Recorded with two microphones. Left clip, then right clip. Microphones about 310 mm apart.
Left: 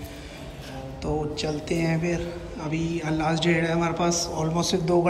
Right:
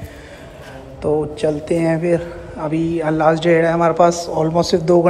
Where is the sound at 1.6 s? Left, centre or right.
Centre.